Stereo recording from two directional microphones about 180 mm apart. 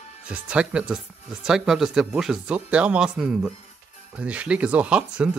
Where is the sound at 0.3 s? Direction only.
5° right (ahead or behind).